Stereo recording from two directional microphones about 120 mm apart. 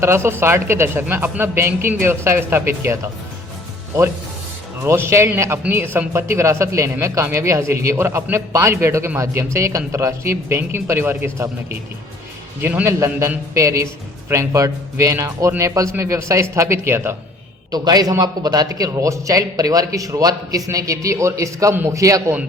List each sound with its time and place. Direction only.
0.0 s speech: 20° right (ahead or behind)
4.8 s speech: 20° right (ahead or behind)
17.7 s speech: 35° right (ahead or behind)